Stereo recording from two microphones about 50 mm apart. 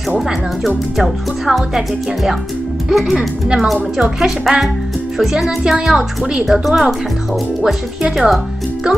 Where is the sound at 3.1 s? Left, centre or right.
Centre.